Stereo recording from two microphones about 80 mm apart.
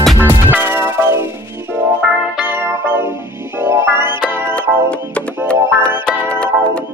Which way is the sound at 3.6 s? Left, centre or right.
Right.